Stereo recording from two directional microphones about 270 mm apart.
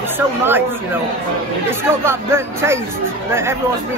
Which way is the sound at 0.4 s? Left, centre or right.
Centre.